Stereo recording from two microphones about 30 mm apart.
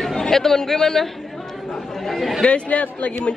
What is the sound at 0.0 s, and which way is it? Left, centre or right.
Speech, centre.